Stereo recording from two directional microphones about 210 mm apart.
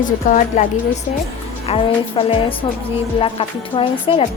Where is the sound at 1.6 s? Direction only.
25° left (ahead or behind).